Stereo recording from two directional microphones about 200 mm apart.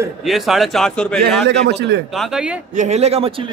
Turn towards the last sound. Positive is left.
turn(degrees=-30)  # may be behind; listen again after turning